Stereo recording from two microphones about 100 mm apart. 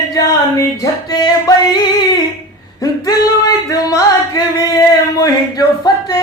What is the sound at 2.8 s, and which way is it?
Singing, 40° left (ahead or behind).